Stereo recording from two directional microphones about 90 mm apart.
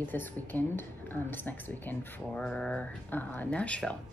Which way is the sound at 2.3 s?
10° left (ahead or behind).